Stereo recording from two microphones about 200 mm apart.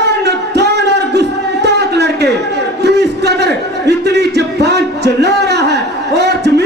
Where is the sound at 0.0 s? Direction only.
55° right (ahead or behind).